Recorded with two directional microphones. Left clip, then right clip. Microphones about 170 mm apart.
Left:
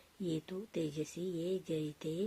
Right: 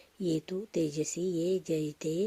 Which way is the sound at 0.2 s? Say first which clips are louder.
Right 7 dB; 50° right (ahead or behind).